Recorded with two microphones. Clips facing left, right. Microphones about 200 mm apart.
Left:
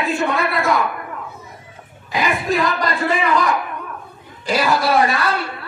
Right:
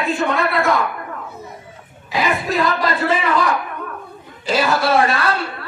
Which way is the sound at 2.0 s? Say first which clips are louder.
Even; 5° right (ahead or behind).